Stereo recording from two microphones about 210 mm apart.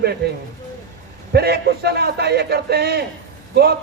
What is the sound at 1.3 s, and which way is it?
A man's voice, 50° right (ahead or behind).